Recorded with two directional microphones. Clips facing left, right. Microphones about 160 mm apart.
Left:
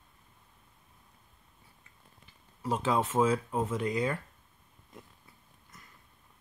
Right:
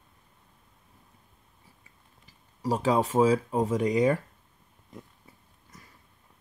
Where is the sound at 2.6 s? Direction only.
35° right (ahead or behind).